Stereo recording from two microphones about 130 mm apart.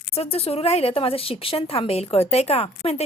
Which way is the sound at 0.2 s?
50° left (ahead or behind).